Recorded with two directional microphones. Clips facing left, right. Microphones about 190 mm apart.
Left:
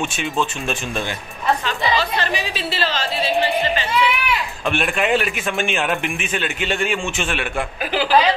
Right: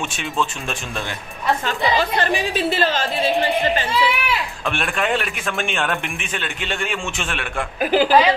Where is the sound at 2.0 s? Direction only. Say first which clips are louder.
Right 2 dB; 50° right (ahead or behind).